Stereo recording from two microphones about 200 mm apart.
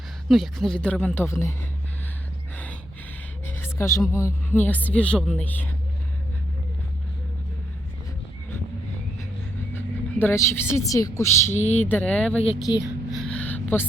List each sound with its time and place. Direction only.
0.3 s speech: centre (ahead or behind)
3.4 s speech: 10° left (ahead or behind)
9.7 s speech: 10° left (ahead or behind)
11.5 s speech: 35° left (ahead or behind)
11.9 s speech: 5° left (ahead or behind)
12.4 s speech: 25° left (ahead or behind)
13.2 s a sound: 5° left (ahead or behind)